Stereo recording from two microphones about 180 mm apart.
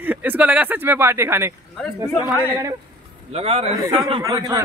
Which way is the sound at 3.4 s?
35° right (ahead or behind).